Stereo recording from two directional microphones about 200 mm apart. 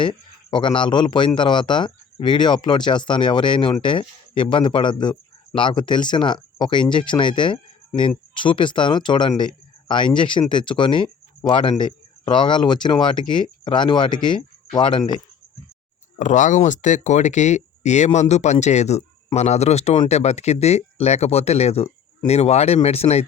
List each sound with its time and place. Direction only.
0.0 s speech: 25° left (ahead or behind)
16.1 s speech: 35° left (ahead or behind)